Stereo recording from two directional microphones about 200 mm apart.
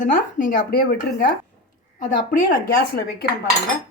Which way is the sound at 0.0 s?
45° left (ahead or behind).